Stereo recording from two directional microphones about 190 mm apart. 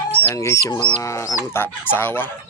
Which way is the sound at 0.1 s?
10° left (ahead or behind).